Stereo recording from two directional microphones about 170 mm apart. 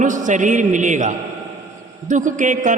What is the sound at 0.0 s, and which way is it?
A man's voice, 50° right (ahead or behind).